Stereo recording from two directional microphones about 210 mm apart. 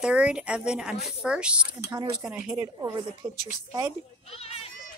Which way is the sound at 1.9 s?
20° right (ahead or behind).